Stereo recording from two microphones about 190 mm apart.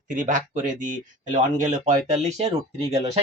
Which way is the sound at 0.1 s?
40° right (ahead or behind).